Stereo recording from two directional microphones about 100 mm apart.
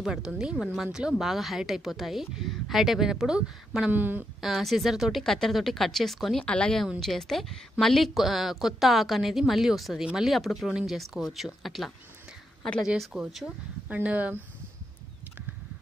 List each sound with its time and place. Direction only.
0.0 s a woman's voice: 5° right (ahead or behind)
3.9 s speech: 20° right (ahead or behind)
4.4 s a woman's voice: centre (ahead or behind)
13.0 s a woman's voice: 5° right (ahead or behind)
13.8 s speech: 15° right (ahead or behind)